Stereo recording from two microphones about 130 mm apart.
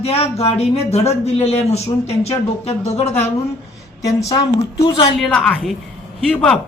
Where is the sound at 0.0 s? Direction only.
50° left (ahead or behind).